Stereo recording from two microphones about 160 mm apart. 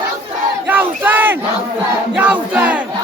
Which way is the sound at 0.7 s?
10° right (ahead or behind).